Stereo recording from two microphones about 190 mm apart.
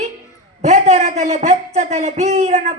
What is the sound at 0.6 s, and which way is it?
Speech, 40° right (ahead or behind).